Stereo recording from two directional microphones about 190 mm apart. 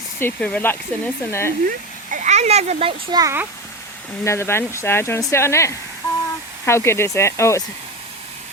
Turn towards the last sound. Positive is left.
turn(degrees=15)  # may be behind; listen again after turning